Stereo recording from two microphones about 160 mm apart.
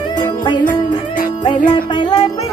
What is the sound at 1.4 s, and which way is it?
Speech, 30° left (ahead or behind).